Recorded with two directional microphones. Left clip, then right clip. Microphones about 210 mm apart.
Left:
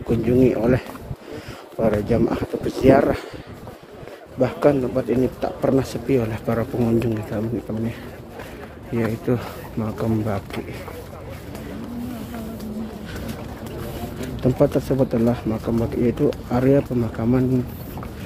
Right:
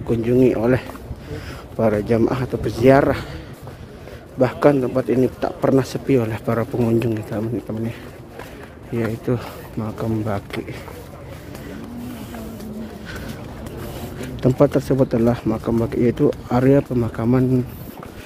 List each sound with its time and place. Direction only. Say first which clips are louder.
0.2 s speech: right 2 dB; 20° right (ahead or behind)
4.4 s speech: right 2 dB; 20° right (ahead or behind)
8.9 s speech: even; 10° right (ahead or behind)
14.2 s speech: right 3 dB; 25° right (ahead or behind)